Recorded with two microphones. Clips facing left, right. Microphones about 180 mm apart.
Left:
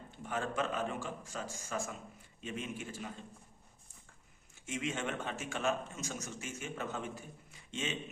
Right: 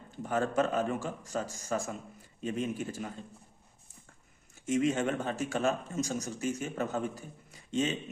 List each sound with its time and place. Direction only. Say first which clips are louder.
0.1 s speech: right 7 dB; 40° right (ahead or behind)
4.6 s speech: right 9 dB; 40° right (ahead or behind)